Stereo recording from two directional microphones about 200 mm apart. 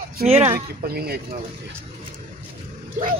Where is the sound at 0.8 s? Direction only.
50° right (ahead or behind).